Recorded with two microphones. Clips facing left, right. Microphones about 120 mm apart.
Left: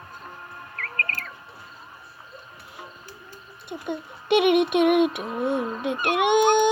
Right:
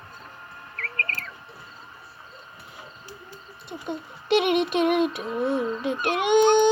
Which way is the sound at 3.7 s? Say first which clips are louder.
Left 2 dB; 10° left (ahead or behind).